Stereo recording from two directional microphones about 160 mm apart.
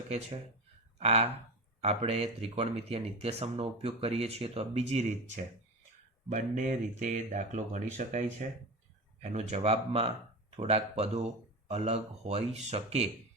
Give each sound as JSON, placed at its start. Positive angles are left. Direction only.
{"t": 0.1, "sound": "speech", "side_deg": -40}